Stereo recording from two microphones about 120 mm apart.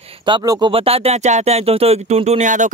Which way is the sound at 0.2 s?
35° right (ahead or behind).